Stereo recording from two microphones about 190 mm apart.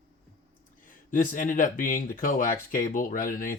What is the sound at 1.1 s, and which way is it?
Speech, 45° left (ahead or behind).